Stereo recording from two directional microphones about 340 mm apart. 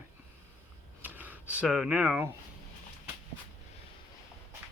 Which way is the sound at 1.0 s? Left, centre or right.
Centre.